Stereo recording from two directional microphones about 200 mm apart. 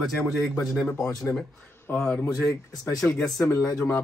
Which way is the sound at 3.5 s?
10° left (ahead or behind).